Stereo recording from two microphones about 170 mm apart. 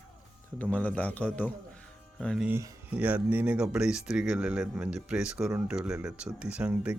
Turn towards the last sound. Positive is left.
turn(degrees=-5)  # may be behind; listen again after turning